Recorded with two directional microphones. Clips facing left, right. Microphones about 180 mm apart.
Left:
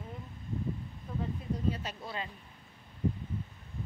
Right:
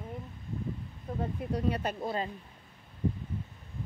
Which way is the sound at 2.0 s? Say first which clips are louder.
Right 7 dB; 45° right (ahead or behind).